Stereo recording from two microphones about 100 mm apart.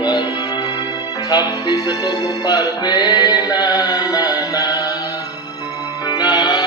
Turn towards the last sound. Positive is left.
turn(degrees=40)  # may be behind; listen again after turning